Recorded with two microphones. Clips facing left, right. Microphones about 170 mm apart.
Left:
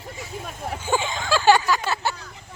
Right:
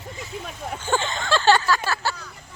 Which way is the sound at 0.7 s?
10° left (ahead or behind).